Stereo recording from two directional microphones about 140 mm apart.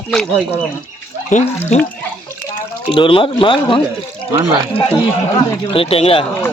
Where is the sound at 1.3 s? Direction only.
60° left (ahead or behind).